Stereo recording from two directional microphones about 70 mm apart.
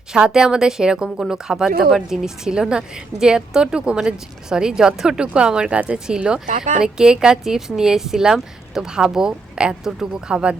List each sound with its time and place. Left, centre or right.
0.1 s speech: centre